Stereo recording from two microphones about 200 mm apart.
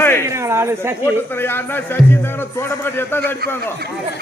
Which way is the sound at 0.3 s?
15° right (ahead or behind).